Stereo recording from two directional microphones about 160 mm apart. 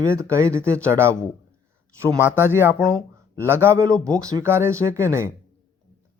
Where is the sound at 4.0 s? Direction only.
5° left (ahead or behind).